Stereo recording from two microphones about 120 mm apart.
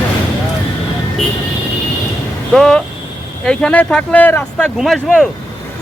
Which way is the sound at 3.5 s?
5° left (ahead or behind).